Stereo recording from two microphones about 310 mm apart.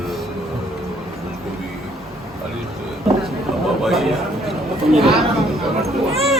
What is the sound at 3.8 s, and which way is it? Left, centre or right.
A man's voice, centre.